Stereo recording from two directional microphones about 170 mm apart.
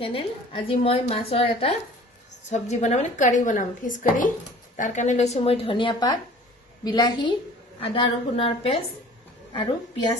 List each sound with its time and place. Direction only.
0.0 s a woman's voice: 30° left (ahead or behind)